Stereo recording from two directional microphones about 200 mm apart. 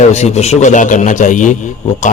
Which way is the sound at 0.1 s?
35° left (ahead or behind).